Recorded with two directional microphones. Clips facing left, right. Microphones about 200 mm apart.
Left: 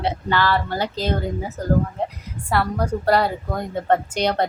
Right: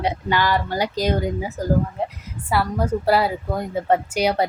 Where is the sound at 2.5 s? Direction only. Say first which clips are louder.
Right 1 dB; 5° right (ahead or behind).